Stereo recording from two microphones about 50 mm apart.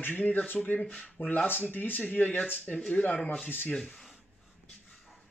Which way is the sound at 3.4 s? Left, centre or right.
Left.